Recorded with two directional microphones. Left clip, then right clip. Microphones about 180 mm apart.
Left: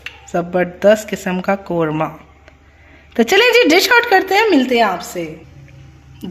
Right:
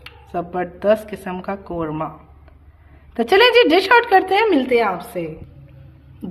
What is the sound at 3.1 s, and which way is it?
Speech, 30° left (ahead or behind).